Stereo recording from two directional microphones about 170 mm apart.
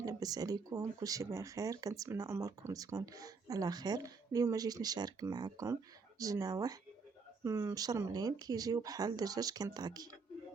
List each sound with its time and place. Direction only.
0.0 s speech: 20° right (ahead or behind)